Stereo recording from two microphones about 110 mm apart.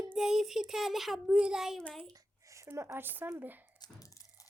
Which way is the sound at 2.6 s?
25° right (ahead or behind).